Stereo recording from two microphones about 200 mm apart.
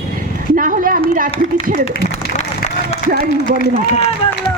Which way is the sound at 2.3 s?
35° left (ahead or behind).